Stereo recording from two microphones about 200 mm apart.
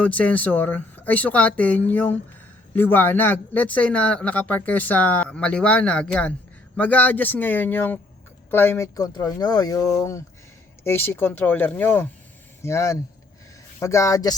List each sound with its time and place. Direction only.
0.0 s speech: 5° left (ahead or behind)